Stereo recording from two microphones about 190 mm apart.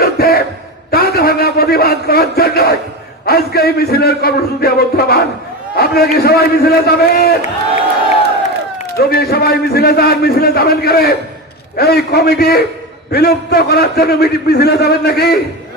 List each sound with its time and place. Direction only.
0.0 s a sound: 55° left (ahead or behind)
0.9 s a man's voice: 55° left (ahead or behind)
9.0 s a man's voice: 55° left (ahead or behind)